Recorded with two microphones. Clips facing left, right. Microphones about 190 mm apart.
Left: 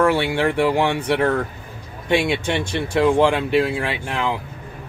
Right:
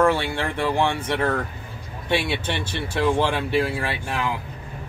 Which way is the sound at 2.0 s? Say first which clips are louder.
Left 5 dB; 15° left (ahead or behind).